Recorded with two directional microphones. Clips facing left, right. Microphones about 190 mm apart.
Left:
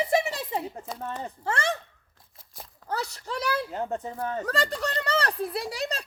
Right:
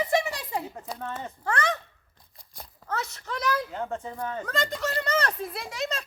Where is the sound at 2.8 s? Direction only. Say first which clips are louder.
Left 1 dB; 35° left (ahead or behind).